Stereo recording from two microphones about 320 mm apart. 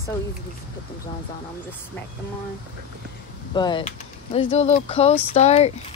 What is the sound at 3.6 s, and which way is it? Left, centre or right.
Speech, centre.